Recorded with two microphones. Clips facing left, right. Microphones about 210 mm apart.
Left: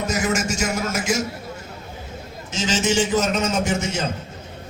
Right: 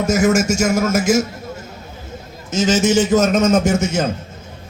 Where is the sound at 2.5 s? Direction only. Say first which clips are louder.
Right 7 dB; 45° right (ahead or behind).